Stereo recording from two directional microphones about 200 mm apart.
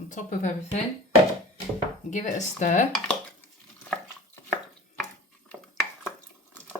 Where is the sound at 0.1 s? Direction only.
40° left (ahead or behind).